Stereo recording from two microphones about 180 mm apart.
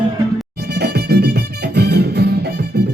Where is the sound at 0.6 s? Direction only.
65° right (ahead or behind).